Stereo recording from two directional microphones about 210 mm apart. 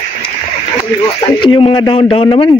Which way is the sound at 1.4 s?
25° left (ahead or behind).